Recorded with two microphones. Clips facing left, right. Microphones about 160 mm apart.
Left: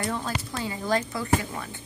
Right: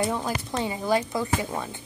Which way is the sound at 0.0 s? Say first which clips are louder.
Right 3 dB; 15° right (ahead or behind).